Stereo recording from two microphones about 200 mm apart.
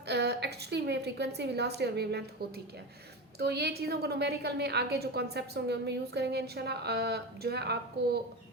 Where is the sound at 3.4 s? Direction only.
55° right (ahead or behind).